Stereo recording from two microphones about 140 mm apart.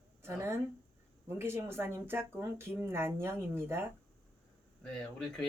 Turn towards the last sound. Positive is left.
turn(degrees=5)  # may be behind; listen again after turning